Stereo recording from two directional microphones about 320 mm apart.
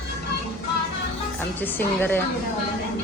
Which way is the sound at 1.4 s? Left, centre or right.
Centre.